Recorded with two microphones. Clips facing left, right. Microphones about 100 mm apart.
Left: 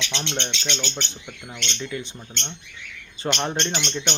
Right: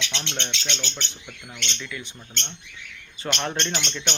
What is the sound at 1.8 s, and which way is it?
Speech, 30° left (ahead or behind).